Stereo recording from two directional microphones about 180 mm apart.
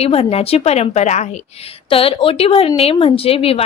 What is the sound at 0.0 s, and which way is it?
A woman's voice, 35° left (ahead or behind).